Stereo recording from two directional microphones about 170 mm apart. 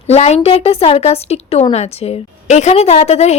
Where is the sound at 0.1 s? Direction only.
40° left (ahead or behind).